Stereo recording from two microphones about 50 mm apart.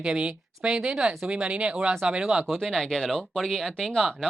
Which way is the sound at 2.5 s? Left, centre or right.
Centre.